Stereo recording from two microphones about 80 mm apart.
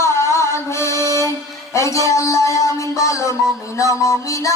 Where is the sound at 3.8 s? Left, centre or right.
Left.